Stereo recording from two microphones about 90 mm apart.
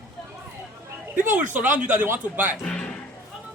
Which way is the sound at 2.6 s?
10° left (ahead or behind).